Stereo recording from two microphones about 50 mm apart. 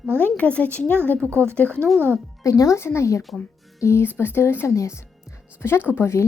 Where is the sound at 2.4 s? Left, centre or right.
Left.